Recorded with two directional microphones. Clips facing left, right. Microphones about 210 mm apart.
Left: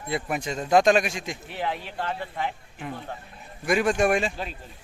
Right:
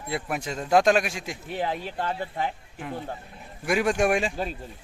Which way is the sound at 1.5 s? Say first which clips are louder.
Right 2 dB; 35° right (ahead or behind).